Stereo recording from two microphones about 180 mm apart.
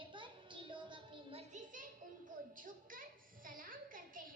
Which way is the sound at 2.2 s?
50° right (ahead or behind).